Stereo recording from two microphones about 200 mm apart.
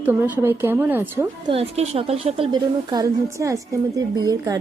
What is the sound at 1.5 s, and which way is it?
A woman's voice, 30° right (ahead or behind).